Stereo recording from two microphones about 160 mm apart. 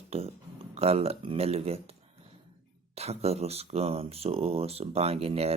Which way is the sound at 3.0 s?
40° right (ahead or behind).